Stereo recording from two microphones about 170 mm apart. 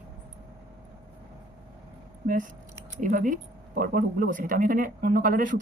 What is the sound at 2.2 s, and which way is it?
A man's voice, 50° right (ahead or behind).